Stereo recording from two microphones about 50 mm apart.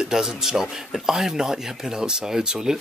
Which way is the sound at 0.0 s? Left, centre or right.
Centre.